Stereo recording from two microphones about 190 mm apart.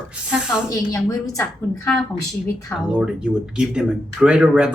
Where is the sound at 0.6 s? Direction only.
15° left (ahead or behind).